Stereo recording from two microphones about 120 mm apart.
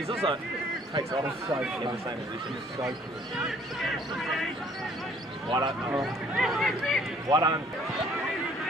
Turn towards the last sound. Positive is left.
turn(degrees=-35)  # may be behind; listen again after turning